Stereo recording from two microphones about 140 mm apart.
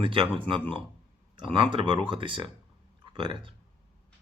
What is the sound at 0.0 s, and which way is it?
Speech, 35° right (ahead or behind).